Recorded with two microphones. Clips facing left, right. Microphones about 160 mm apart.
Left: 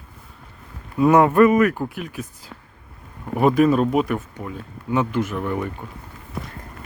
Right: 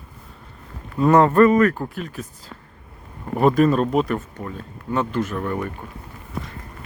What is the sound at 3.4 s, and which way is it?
Speech, 5° left (ahead or behind).